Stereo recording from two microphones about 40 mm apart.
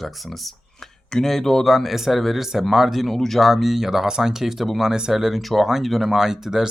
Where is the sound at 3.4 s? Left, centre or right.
Centre.